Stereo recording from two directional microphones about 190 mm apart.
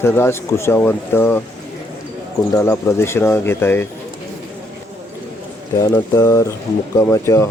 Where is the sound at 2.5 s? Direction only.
15° left (ahead or behind).